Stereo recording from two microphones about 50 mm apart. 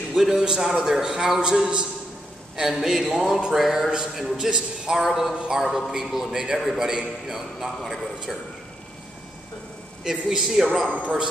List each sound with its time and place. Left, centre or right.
0.1 s a man's voice: centre
10.0 s a man's voice: centre
11.0 s a man's voice: right